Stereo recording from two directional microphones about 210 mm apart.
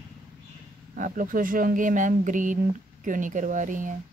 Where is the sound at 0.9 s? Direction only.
40° right (ahead or behind).